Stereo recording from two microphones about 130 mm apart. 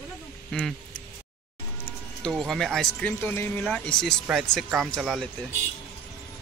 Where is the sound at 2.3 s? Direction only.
Centre (ahead or behind).